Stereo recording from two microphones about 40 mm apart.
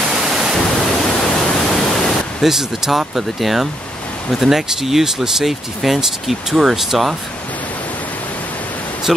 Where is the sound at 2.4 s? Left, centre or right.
Centre.